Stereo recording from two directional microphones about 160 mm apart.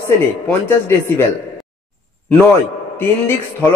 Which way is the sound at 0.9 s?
15° left (ahead or behind).